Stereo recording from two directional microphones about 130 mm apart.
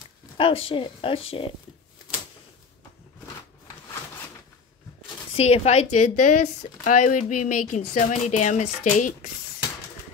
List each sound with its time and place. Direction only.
0.4 s a woman's voice: 45° left (ahead or behind)
5.3 s speech: 50° left (ahead or behind); by 9.3 s 85° left